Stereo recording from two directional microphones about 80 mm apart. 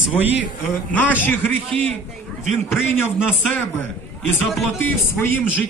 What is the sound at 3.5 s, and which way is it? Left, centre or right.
A man's voice, left.